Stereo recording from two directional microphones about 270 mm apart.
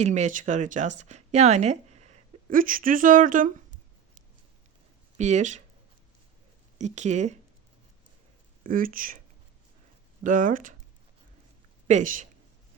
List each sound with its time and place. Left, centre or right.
0.0 s speech: right
5.1 s speech: right
6.7 s speech: right
8.6 s speech: right
10.2 s speech: right
11.9 s speech: right